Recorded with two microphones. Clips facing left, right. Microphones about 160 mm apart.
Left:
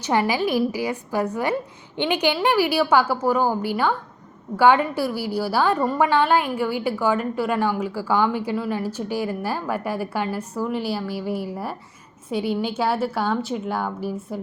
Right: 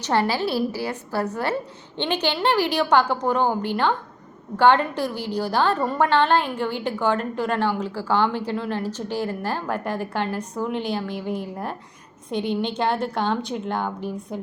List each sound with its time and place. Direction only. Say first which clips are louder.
0.0 s a woman's voice: left 1 dB; 15° left (ahead or behind)